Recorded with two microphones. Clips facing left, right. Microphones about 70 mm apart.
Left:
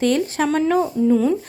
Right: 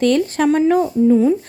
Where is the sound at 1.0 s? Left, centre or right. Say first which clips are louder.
Right 4 dB; right.